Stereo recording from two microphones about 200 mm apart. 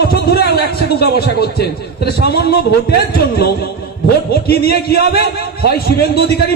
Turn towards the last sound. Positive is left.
turn(degrees=50)  # may be behind; listen again after turning